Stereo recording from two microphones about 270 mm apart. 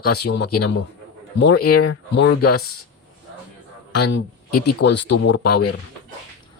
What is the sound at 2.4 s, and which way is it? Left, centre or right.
Speech, left.